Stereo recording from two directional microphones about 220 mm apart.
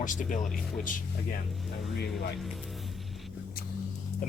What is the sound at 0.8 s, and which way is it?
Speech, 40° left (ahead or behind).